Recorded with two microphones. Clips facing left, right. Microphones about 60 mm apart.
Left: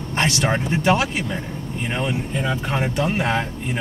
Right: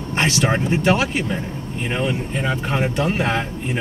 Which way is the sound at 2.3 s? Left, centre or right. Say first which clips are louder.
Right 1 dB; centre.